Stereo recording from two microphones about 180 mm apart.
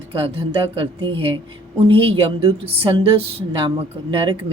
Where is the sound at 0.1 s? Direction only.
30° right (ahead or behind).